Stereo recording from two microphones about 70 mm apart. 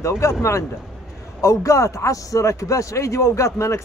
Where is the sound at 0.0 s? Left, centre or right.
Left.